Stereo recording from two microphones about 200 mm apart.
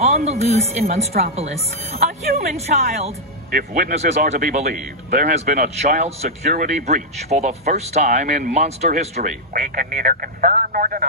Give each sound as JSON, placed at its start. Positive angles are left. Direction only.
{"t": 0.0, "sound": "a man's voice", "side_deg": -30}
{"t": 3.5, "sound": "a man's voice", "side_deg": -40}